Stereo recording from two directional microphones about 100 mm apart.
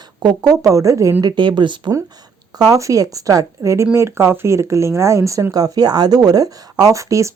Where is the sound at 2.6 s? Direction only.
35° right (ahead or behind).